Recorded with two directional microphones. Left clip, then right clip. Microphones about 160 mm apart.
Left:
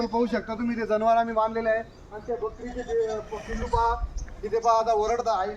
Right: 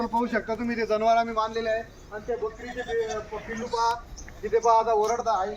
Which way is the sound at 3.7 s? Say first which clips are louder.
Left 1 dB; 40° left (ahead or behind).